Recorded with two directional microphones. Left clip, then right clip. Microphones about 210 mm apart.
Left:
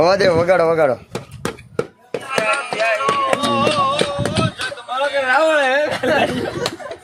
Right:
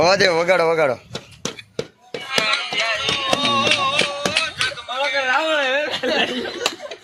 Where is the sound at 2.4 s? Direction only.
35° left (ahead or behind).